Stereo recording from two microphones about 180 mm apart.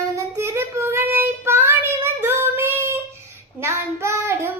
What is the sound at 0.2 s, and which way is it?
Child singing, 15° right (ahead or behind).